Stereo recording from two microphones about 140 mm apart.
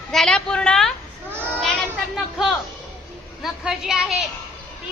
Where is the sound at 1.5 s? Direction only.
5° left (ahead or behind).